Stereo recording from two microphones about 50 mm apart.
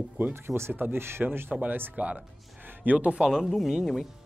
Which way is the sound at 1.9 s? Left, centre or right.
Right.